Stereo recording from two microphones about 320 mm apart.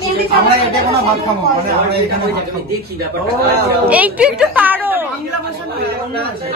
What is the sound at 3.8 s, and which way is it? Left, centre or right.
A woman's voice, centre.